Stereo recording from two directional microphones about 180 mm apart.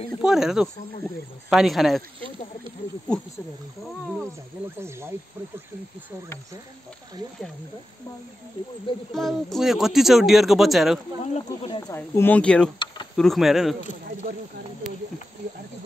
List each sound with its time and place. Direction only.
0.2 s speech: 5° right (ahead or behind)
4.7 s speech: 15° right (ahead or behind)
9.1 s speech: centre (ahead or behind)
11.3 s speech: 30° left (ahead or behind)
11.9 s speech: 10° left (ahead or behind)
12.7 s speech: 25° left (ahead or behind)
13.1 s speech: centre (ahead or behind)